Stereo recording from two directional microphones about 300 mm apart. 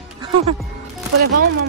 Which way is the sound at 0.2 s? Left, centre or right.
Centre.